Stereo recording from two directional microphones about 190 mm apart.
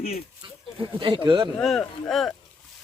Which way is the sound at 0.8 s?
25° right (ahead or behind).